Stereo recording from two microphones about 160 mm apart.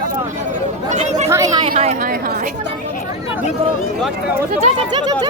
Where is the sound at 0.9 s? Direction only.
45° right (ahead or behind).